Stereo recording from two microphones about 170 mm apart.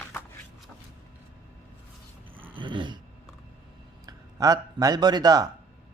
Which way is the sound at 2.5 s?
30° right (ahead or behind).